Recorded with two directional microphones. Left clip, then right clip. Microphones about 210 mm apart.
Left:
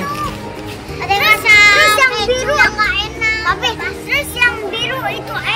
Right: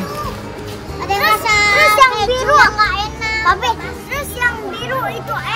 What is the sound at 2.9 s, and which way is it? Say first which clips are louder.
Children playing: left 2 dB; 50° right (ahead or behind).